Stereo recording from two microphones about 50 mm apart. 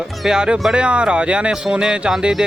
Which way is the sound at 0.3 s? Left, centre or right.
Centre.